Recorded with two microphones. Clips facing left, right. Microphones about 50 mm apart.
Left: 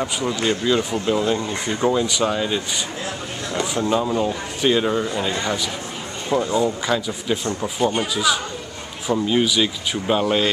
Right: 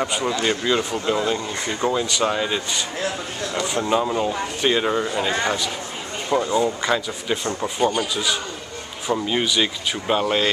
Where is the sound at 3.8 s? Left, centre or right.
Centre.